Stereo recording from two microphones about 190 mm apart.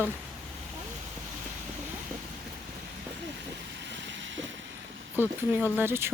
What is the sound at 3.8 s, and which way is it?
Vehicle, 70° right (ahead or behind).